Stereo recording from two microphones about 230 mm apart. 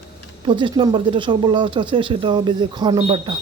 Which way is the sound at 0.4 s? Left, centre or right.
Right.